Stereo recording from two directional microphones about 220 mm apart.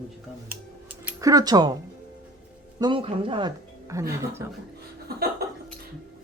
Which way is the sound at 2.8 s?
25° right (ahead or behind).